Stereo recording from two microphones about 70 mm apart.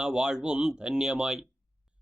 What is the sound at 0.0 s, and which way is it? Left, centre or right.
Speech, centre.